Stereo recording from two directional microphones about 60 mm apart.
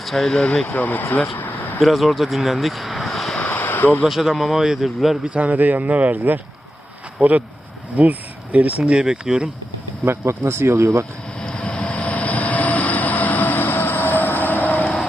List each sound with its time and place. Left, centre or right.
0.0 s speech: centre
0.4 s speech: centre
1.4 s a sound: left
1.8 s speech: centre
3.3 s a sound: left
4.0 s a man's voice: centre
5.2 s a man's voice: right
10.1 s speech: right
11.3 s train: centre